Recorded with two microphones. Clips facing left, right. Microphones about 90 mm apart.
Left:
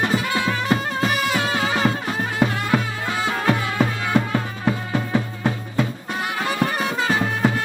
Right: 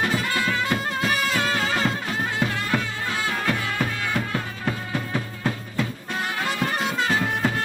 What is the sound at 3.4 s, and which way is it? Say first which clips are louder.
Music: left 5 dB; 25° left (ahead or behind).